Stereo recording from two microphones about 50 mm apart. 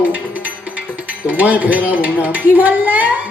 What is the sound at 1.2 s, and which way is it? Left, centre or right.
A woman's voice, right.